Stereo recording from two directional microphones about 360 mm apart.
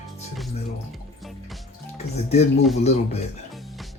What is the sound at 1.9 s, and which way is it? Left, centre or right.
Speech, centre.